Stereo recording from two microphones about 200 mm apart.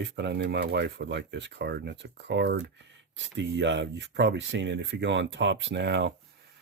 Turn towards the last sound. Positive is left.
turn(degrees=-60)  # may be behind; listen again after turning